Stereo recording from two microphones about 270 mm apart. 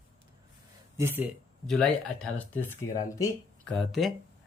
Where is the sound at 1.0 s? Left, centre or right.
Centre.